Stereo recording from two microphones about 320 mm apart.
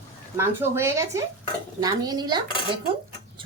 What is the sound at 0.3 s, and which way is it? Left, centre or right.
A woman's voice, centre.